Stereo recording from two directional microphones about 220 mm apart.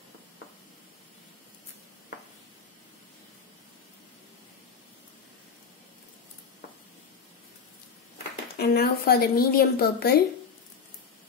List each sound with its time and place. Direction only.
8.5 s a woman's voice: 45° left (ahead or behind)